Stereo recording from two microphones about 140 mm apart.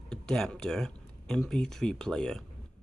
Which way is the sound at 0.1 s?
5° left (ahead or behind).